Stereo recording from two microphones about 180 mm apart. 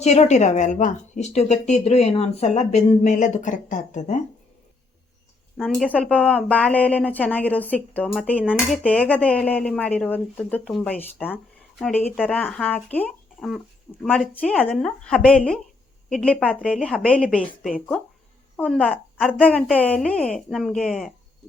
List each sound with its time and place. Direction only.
0.0 s speech: 40° left (ahead or behind)
5.5 s a woman's voice: 5° left (ahead or behind)
18.5 s a woman's voice: 5° left (ahead or behind)